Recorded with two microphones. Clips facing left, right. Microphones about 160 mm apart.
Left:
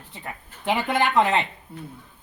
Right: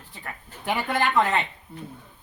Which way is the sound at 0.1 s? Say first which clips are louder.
Left 2 dB; 20° left (ahead or behind).